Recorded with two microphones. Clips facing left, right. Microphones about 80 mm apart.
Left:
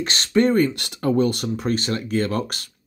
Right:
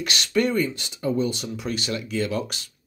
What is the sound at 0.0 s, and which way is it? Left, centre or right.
Speech, left.